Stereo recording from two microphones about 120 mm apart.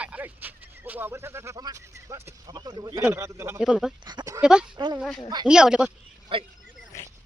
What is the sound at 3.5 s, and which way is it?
Speech, 5° right (ahead or behind).